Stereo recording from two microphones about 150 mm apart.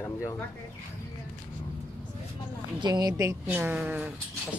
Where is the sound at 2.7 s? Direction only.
25° right (ahead or behind); by 4.0 s 5° right (ahead or behind).